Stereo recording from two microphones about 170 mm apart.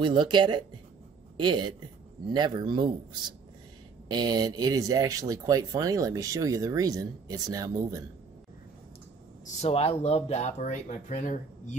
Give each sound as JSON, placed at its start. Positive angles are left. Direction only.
{"t": 0.0, "sound": "a man's voice", "side_deg": -25}
{"t": 9.6, "sound": "speech", "side_deg": 35}